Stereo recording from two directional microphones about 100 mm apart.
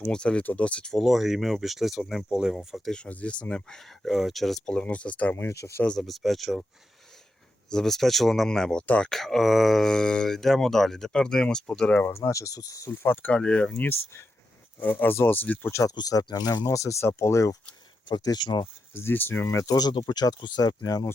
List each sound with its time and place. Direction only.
0.0 s speech: 10° left (ahead or behind); by 5.8 s 30° left (ahead or behind)
6.0 s speech: centre (ahead or behind)
7.7 s speech: 5° left (ahead or behind)
12.1 s speech: 30° left (ahead or behind)
12.9 s speech: 20° left (ahead or behind)
15.8 s speech: 35° left (ahead or behind)
18.1 s speech: 45° left (ahead or behind)
18.9 s speech: 20° left (ahead or behind)
19.7 s speech: 45° left (ahead or behind)